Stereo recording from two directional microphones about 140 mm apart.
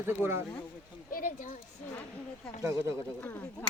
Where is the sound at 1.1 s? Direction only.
85° left.